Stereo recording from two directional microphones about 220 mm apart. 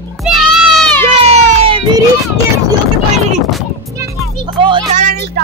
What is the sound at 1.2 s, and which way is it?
Music, 25° right (ahead or behind).